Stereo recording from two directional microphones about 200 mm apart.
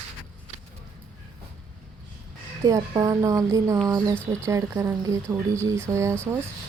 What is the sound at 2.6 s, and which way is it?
Speech, 20° right (ahead or behind).